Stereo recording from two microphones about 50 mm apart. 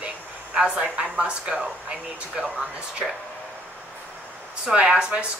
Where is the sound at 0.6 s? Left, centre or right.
Right.